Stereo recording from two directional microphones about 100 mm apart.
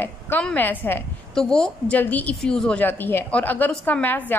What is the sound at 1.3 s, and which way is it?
Speech, 5° left (ahead or behind).